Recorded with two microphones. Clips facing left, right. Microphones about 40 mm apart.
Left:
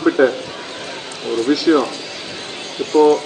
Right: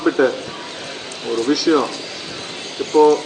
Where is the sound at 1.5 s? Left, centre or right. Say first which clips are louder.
Left 2 dB; left.